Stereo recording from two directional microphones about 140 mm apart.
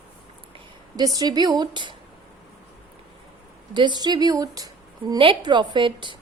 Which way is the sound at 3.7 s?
35° right (ahead or behind).